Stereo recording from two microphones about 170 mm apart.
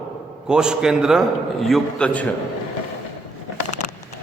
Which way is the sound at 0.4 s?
5° right (ahead or behind).